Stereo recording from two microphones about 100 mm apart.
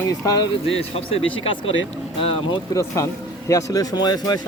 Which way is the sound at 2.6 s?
30° left (ahead or behind).